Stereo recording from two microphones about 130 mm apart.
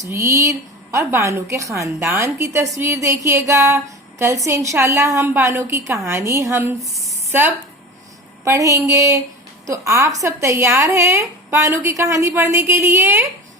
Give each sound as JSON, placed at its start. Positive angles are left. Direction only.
{"t": 0.0, "sound": "speech", "side_deg": -20}